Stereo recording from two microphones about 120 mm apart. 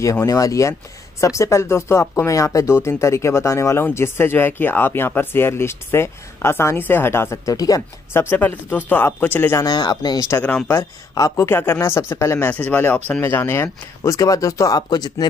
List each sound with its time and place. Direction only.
0.0 s speech: 25° left (ahead or behind)
9.7 s speech: 35° left (ahead or behind)
10.4 s speech: 20° left (ahead or behind); by 15.2 s 35° left (ahead or behind)